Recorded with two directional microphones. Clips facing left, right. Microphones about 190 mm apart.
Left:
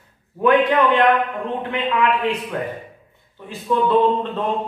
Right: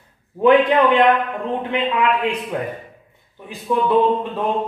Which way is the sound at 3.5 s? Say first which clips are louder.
Even; 15° right (ahead or behind).